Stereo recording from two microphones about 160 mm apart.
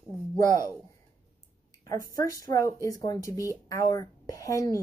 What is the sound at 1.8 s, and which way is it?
Speech, 20° left (ahead or behind).